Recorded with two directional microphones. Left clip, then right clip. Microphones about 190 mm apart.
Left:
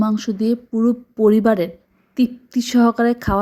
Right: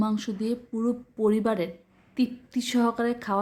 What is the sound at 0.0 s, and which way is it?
A woman's voice, 25° left (ahead or behind).